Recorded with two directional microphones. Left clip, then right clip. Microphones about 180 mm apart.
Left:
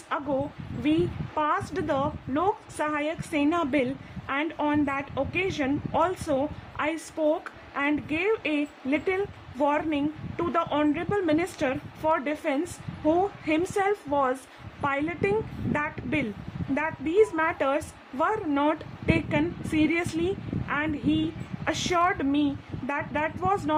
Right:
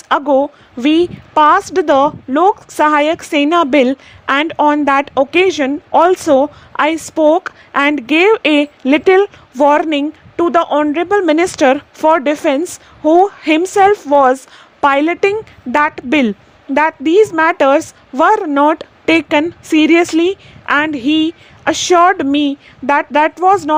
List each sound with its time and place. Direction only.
0.8 s a woman's voice: 50° right (ahead or behind)